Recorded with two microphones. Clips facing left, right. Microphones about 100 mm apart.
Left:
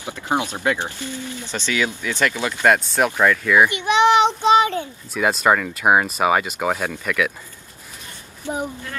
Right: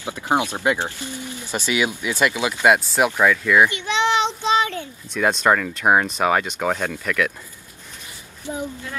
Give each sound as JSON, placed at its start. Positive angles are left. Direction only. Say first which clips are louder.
{"t": 0.0, "sound": "speech", "louder": "right 2 dB", "side_deg": -15}
{"t": 3.6, "sound": "a sound", "louder": "left 4 dB", "side_deg": 15}
{"t": 4.4, "sound": "child singing", "louder": "left 5 dB", "side_deg": 20}
{"t": 5.1, "sound": "speech", "louder": "even", "side_deg": 5}